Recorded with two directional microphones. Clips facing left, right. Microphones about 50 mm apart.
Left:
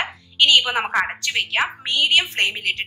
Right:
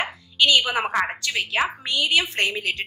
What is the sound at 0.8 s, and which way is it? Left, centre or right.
Speech, centre.